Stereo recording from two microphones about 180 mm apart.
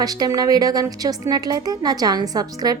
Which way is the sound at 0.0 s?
20° right (ahead or behind).